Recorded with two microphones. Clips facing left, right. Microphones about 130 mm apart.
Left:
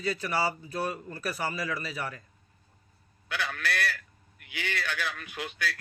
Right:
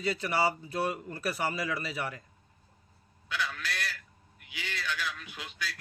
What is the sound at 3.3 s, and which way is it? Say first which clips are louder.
A man's voice: left 3 dB; 60° left (ahead or behind).